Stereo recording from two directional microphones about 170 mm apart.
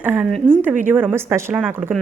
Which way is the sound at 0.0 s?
10° right (ahead or behind).